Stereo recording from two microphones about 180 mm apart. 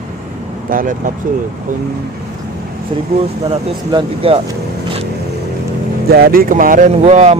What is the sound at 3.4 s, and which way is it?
Speech, 30° right (ahead or behind).